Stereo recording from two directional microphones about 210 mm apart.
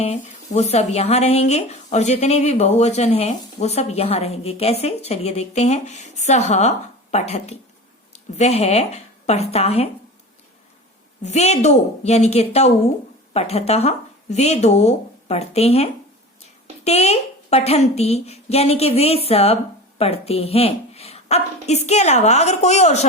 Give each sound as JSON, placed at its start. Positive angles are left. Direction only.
{"t": 0.0, "sound": "speech", "side_deg": 30}
{"t": 11.2, "sound": "a woman's voice", "side_deg": 30}